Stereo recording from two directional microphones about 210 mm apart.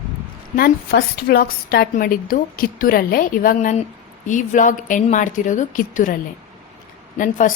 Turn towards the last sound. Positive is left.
turn(degrees=40)  # may be behind; listen again after turning